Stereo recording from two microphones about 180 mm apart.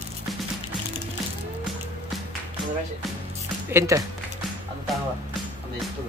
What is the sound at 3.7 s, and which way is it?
Speech, 15° right (ahead or behind).